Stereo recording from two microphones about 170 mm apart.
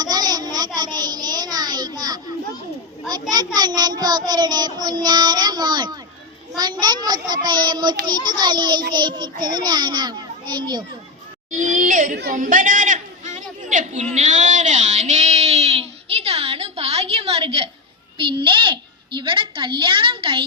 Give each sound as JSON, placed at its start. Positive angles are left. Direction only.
{"t": 0.0, "sound": "child singing", "side_deg": -25}
{"t": 0.8, "sound": "a sound", "side_deg": -25}
{"t": 3.1, "sound": "a child's voice", "side_deg": -25}
{"t": 11.5, "sound": "a child's voice", "side_deg": -45}
{"t": 12.1, "sound": "a woman's voice", "side_deg": -70}
{"t": 12.4, "sound": "a sound", "side_deg": -50}
{"t": 18.2, "sound": "a child's voice", "side_deg": -30}